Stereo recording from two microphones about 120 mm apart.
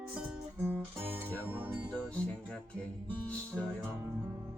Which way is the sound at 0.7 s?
20° right (ahead or behind).